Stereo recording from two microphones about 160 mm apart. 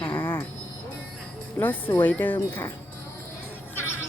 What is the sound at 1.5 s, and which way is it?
Speech, 10° left (ahead or behind).